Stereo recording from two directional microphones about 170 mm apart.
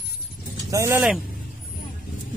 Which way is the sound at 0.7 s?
20° right (ahead or behind).